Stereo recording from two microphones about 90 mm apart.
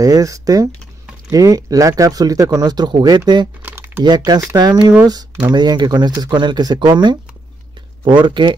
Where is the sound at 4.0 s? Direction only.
50° right (ahead or behind).